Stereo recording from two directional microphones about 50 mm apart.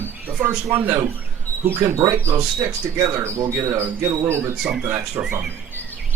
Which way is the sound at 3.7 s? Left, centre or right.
Right.